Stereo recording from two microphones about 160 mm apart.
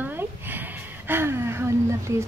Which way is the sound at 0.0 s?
10° right (ahead or behind).